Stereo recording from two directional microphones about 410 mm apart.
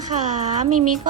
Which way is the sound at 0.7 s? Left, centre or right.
Right.